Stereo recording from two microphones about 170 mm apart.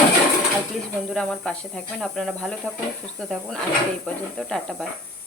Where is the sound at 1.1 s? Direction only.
5° left (ahead or behind).